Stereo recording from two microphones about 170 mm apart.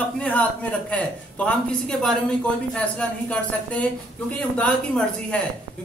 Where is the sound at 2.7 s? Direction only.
5° left (ahead or behind).